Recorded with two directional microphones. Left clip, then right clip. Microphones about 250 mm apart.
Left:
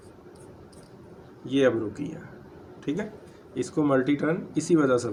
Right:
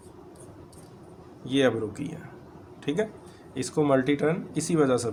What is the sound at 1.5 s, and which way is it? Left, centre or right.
Speech, right.